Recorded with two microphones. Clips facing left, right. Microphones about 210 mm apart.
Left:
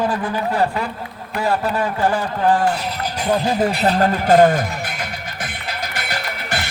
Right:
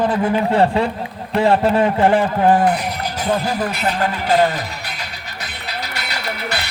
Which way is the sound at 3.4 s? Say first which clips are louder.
Left 3 dB; 30° left (ahead or behind).